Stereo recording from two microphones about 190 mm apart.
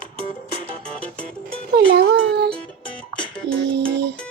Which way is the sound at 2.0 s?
60° right (ahead or behind).